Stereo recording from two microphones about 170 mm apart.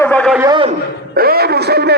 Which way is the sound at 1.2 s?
65° right (ahead or behind).